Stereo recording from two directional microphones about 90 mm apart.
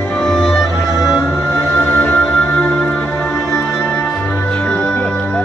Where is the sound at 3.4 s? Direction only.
30° left (ahead or behind).